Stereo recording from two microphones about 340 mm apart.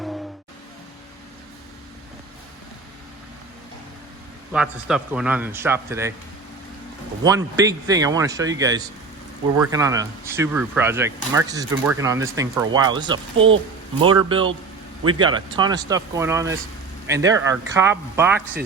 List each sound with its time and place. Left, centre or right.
4.5 s a man's voice: centre
7.3 s speech: centre
13.3 s speech: right
14.0 s speech: centre